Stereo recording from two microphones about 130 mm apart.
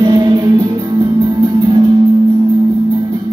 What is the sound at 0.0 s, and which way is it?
Music, 35° right (ahead or behind).